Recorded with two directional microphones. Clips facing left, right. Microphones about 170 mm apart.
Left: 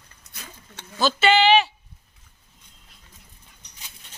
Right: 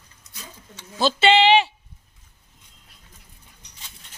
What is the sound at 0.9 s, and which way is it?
Speech, 25° right (ahead or behind).